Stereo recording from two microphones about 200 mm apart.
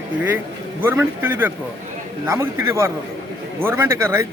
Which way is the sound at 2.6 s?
15° right (ahead or behind).